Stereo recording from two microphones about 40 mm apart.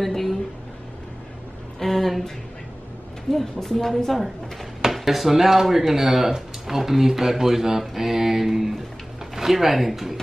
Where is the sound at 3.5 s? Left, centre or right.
Centre.